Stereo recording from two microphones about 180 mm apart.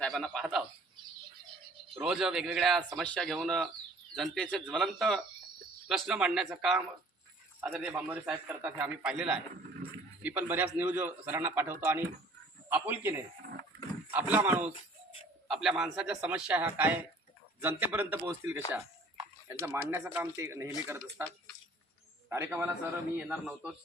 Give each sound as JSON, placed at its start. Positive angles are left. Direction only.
{"t": 0.0, "sound": "a man's voice", "side_deg": 0}
{"t": 2.0, "sound": "a man's voice", "side_deg": -5}